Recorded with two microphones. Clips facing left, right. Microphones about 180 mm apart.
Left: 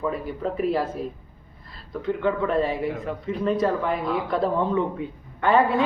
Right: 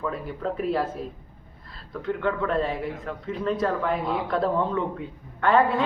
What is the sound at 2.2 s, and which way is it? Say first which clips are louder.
Speech: left 3 dB; 5° left (ahead or behind).